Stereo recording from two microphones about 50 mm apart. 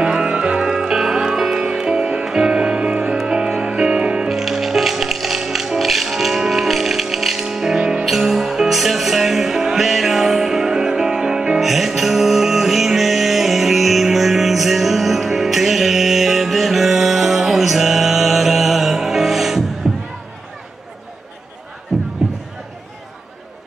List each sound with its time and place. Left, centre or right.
0.0 s music: centre
4.3 s music: centre
21.9 s music: centre